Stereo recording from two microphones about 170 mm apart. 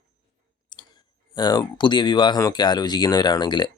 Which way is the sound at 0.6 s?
25° left (ahead or behind).